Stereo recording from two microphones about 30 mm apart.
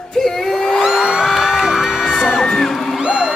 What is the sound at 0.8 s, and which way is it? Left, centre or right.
Music, centre.